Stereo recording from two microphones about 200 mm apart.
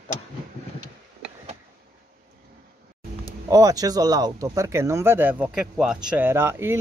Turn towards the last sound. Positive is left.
turn(degrees=-10)  # may be behind; listen again after turning